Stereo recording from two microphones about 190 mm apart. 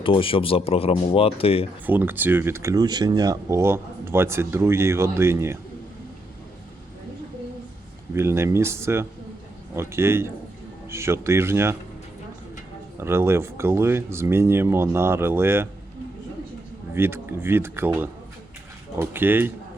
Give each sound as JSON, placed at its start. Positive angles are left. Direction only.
{"t": 0.0, "sound": "speech", "side_deg": 30}
{"t": 1.9, "sound": "speech", "side_deg": -10}
{"t": 8.1, "sound": "speech", "side_deg": -15}
{"t": 13.0, "sound": "speech", "side_deg": -15}
{"t": 16.9, "sound": "speech", "side_deg": -10}